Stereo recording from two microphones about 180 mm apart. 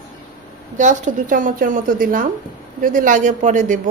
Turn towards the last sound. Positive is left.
turn(degrees=-45)  # may be behind; listen again after turning